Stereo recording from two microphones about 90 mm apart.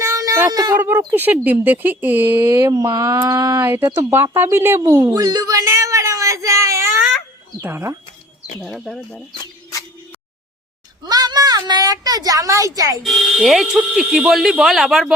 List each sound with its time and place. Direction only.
0.0 s a sound: 35° right (ahead or behind)
0.5 s speech: 45° right (ahead or behind)
0.8 s speech: 25° right (ahead or behind)
2.7 s mantra: 45° right (ahead or behind)
3.6 s speech: 25° right (ahead or behind)
5.0 s a sound: 45° right (ahead or behind)
7.6 s speech: 30° right (ahead or behind)
8.6 s speech: 5° right (ahead or behind)
11.0 s speech: 50° right (ahead or behind)
13.0 s speech: centre (ahead or behind)